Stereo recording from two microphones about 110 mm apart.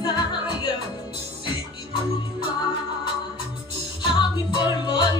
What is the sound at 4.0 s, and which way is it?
Music, 50° left (ahead or behind).